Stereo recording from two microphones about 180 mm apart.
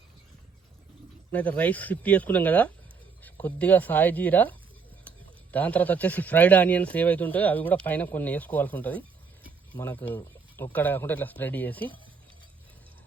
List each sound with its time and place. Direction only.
1.3 s speech: 10° left (ahead or behind)